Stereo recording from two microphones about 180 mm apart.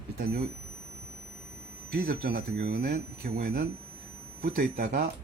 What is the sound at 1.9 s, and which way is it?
Speech, 60° right (ahead or behind).